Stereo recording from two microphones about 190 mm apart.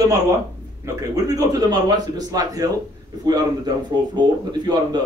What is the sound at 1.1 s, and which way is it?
Speech, 20° right (ahead or behind).